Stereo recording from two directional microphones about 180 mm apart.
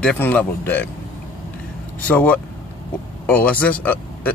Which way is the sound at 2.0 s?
10° left (ahead or behind).